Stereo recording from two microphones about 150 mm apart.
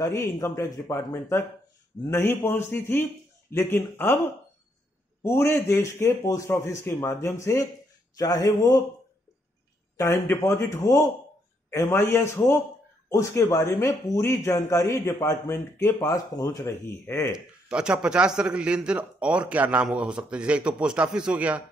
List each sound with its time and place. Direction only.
0.0 s a man's voice: 20° left (ahead or behind)
5.2 s a man's voice: 15° left (ahead or behind)
9.9 s a man's voice: 20° left (ahead or behind)
17.6 s a man's voice: 5° right (ahead or behind)